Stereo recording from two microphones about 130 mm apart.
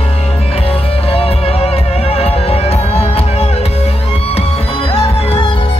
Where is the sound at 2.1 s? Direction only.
50° left (ahead or behind).